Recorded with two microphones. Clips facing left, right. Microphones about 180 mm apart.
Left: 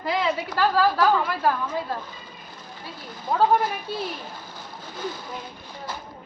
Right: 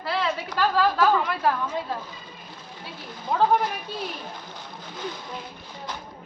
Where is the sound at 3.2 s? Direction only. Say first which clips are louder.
Left 1 dB; 5° left (ahead or behind).